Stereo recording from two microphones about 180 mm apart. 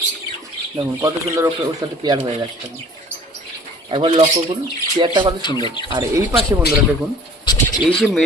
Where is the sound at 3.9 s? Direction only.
30° right (ahead or behind).